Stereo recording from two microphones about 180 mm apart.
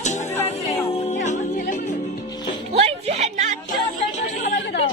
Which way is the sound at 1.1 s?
45° left (ahead or behind).